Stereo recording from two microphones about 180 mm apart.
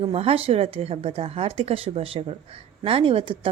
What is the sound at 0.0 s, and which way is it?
A woman's voice, 35° right (ahead or behind).